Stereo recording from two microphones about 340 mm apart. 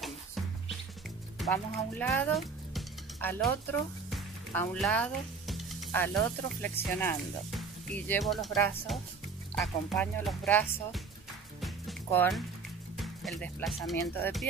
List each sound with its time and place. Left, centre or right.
0.0 s music: centre
1.4 s speech: centre
4.1 s music: centre
6.7 s speech: centre
11.6 s music: centre
12.9 s speech: centre